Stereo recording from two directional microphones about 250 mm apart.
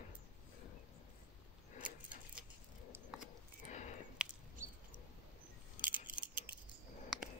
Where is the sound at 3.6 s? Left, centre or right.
Left.